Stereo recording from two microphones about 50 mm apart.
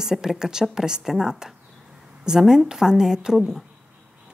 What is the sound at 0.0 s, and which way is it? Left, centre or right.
A woman's voice, centre.